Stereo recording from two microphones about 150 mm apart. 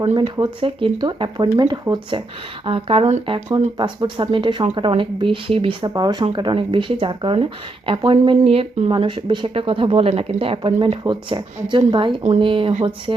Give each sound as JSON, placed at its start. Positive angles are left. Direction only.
{"t": 0.0, "sound": "speech", "side_deg": -40}
{"t": 5.9, "sound": "speech", "side_deg": -25}